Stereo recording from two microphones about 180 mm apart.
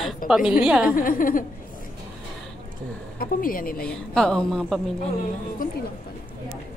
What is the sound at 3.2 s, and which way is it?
Speech, 50° left (ahead or behind).